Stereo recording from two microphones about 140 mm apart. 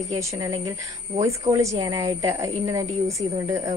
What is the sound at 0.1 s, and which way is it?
A woman's voice, 25° right (ahead or behind).